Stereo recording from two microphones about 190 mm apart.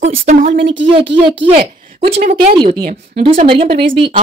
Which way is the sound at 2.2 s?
45° right (ahead or behind).